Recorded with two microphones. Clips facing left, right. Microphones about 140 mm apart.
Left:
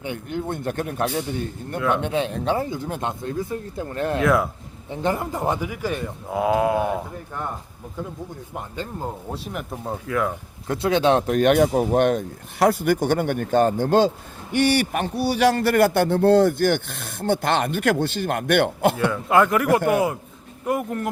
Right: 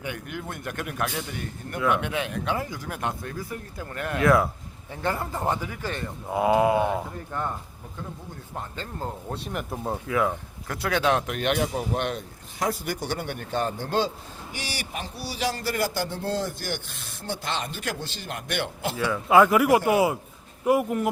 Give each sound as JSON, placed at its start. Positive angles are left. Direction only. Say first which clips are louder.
{"t": 0.0, "sound": "speech", "louder": "left 6 dB", "side_deg": 25}
{"t": 1.7, "sound": "speech", "louder": "left 2 dB", "side_deg": 0}
{"t": 2.0, "sound": "speech", "louder": "left 5 dB", "side_deg": 30}
{"t": 4.2, "sound": "speech", "louder": "even", "side_deg": 0}
{"t": 4.9, "sound": "speech", "louder": "left 5 dB", "side_deg": 20}
{"t": 6.2, "sound": "speech", "louder": "even", "side_deg": 0}
{"t": 8.7, "sound": "speech", "louder": "left 5 dB", "side_deg": 10}
{"t": 10.7, "sound": "speech", "louder": "left 5 dB", "side_deg": 25}
{"t": 12.5, "sound": "a man's voice", "louder": "left 10 dB", "side_deg": 60}
{"t": 14.5, "sound": "speech", "louder": "left 16 dB", "side_deg": 60}
{"t": 19.1, "sound": "speech", "louder": "even", "side_deg": -5}